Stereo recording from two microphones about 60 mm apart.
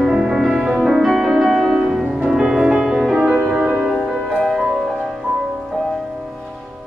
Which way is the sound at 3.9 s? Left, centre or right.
Centre.